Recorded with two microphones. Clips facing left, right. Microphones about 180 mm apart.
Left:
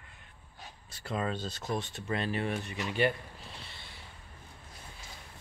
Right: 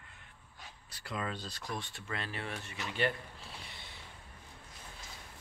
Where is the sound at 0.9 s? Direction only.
30° left (ahead or behind).